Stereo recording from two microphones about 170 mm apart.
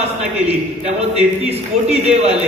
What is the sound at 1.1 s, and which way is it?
A man's voice, 40° right (ahead or behind).